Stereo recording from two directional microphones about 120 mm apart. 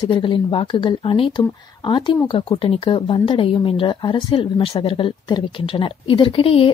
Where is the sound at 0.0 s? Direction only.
45° left (ahead or behind).